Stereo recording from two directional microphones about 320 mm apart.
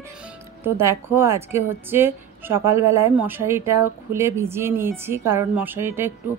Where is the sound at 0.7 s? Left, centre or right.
Centre.